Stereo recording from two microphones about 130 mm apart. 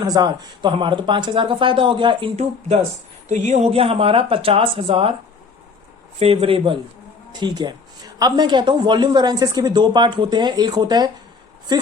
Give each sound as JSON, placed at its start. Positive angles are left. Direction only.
{"t": 0.0, "sound": "speech", "side_deg": -30}
{"t": 3.2, "sound": "speech", "side_deg": -65}
{"t": 6.1, "sound": "speech", "side_deg": -45}